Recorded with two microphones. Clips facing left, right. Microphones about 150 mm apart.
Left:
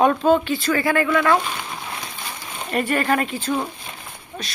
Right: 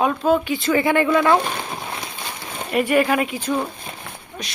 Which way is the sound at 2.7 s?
10° right (ahead or behind).